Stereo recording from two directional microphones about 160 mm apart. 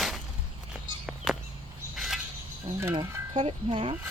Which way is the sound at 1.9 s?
Centre (ahead or behind).